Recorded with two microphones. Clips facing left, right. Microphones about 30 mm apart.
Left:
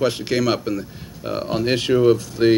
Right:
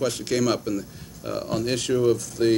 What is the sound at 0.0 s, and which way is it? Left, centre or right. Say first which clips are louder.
A man's voice: left 4 dB; left.